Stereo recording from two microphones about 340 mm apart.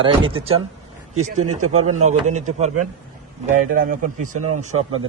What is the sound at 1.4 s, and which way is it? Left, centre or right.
Speech, right.